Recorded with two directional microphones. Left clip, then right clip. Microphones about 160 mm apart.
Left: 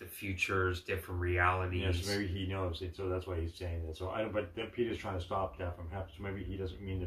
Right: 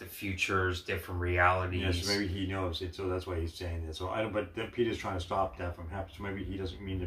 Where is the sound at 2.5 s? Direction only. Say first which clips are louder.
Right 3 dB; 15° right (ahead or behind).